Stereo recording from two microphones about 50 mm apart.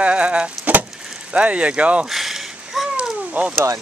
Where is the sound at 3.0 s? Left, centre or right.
Right.